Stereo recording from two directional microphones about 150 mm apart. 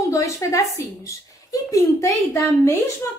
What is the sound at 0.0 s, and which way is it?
A woman's voice, 20° left (ahead or behind).